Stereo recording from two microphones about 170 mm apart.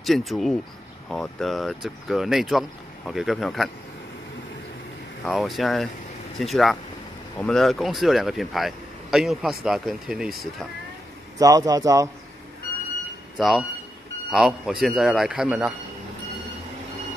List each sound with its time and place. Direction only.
0.0 s speech: centre (ahead or behind)
5.2 s speech: centre (ahead or behind)
11.3 s a man's voice: 20° right (ahead or behind)
13.4 s speech: centre (ahead or behind)